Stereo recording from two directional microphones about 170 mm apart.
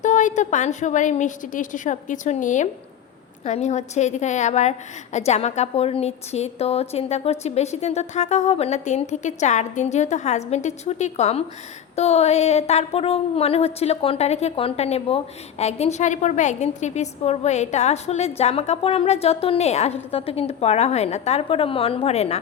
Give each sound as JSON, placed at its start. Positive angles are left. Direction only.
{"t": 0.0, "sound": "a woman's voice", "side_deg": 45}